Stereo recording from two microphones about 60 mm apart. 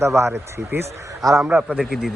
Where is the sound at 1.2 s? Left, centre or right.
Right.